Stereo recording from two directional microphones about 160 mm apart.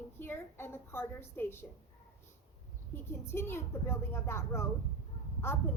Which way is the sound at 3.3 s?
15° left (ahead or behind).